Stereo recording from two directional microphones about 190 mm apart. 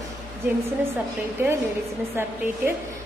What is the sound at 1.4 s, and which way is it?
Speech, 10° right (ahead or behind).